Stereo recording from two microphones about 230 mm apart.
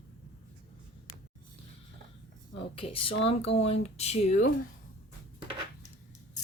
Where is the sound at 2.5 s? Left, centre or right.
Left.